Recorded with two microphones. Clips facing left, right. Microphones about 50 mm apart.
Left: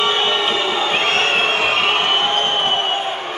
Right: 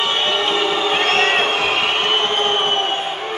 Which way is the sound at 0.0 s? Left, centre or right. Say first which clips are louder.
Left 1 dB; centre.